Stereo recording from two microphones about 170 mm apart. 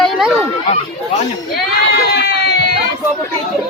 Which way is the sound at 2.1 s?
75° left (ahead or behind).